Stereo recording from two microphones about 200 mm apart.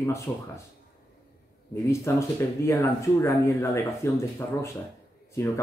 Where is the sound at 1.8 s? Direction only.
15° left (ahead or behind).